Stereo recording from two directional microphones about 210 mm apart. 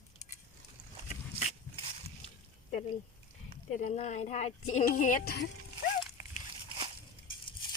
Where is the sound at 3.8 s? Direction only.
35° left (ahead or behind).